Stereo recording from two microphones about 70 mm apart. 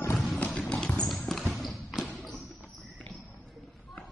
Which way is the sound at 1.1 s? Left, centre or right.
Centre.